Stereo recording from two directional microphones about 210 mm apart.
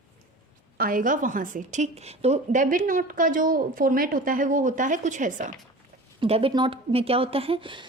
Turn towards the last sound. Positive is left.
turn(degrees=-25)  # may be behind; listen again after turning